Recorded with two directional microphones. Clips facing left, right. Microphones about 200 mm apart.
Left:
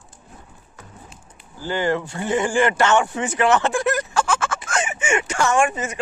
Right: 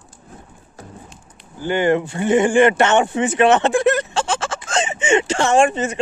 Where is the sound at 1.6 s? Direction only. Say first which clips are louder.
Right 5 dB; 20° right (ahead or behind).